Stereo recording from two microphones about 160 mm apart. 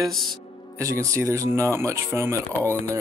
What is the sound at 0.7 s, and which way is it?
Speech, 20° right (ahead or behind).